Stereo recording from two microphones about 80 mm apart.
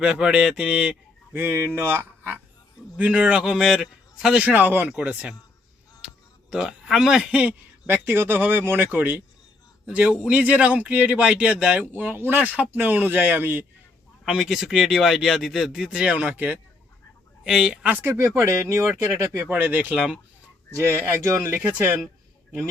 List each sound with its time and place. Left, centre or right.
0.0 s speech: centre
1.3 s speech: right
3.0 s speech: centre
4.4 s speech: right
4.9 s speech: centre
6.5 s a man's voice: centre
7.9 s speech: right
11.9 s speech: right
14.3 s speech: centre
18.0 s speech: right
19.5 s speech: centre
20.7 s speech: right
21.6 s speech: centre